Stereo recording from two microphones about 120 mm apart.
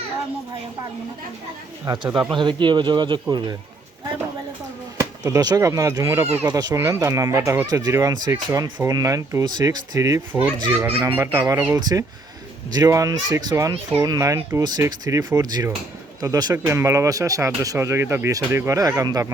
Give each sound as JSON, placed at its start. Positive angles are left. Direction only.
{"t": 1.9, "sound": "speech", "side_deg": -35}
{"t": 4.9, "sound": "speech", "side_deg": -30}
{"t": 10.7, "sound": "speech", "side_deg": -15}
{"t": 14.6, "sound": "speech", "side_deg": -35}